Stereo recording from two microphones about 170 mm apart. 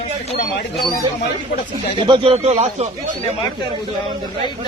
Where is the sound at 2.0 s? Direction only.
30° right (ahead or behind).